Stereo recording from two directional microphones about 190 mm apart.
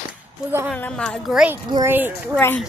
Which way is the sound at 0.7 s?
5° left (ahead or behind).